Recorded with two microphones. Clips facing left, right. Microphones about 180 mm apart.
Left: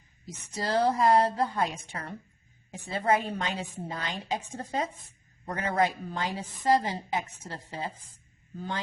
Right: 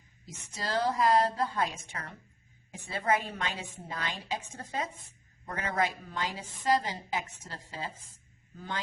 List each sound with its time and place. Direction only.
0.5 s a woman's voice: 25° left (ahead or behind)